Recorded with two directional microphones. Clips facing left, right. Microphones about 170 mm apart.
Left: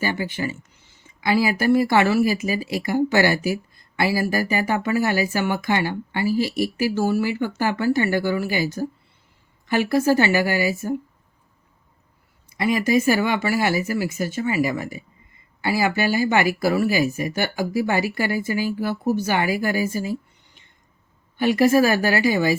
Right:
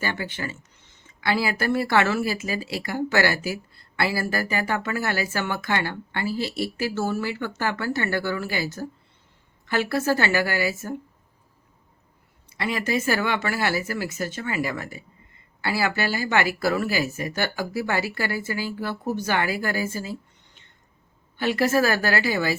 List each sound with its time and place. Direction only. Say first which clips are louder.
0.0 s speech: left 5 dB; 10° left (ahead or behind)
12.5 s speech: left 6 dB; 15° left (ahead or behind)